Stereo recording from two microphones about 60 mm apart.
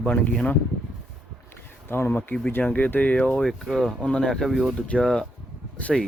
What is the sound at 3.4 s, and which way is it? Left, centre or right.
Speech, centre.